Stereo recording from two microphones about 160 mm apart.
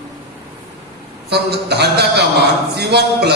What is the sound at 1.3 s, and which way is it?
A man's voice, 90° right.